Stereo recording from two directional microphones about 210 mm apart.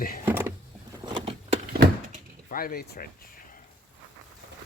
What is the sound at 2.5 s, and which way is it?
Speech, 45° left (ahead or behind).